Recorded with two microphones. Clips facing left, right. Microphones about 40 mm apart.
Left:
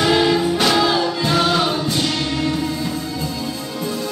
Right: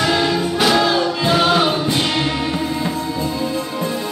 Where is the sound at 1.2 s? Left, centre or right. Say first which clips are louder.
Right 4 dB; centre.